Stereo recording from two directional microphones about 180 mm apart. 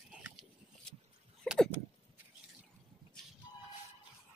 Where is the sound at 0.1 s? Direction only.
5° right (ahead or behind).